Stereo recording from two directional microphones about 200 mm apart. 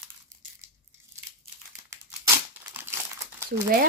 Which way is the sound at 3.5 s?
50° right (ahead or behind).